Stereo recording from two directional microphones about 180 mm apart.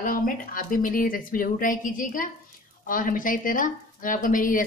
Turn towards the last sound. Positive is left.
turn(degrees=50)  # may be behind; listen again after turning